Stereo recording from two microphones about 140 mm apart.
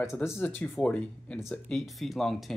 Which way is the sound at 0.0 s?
20° left (ahead or behind).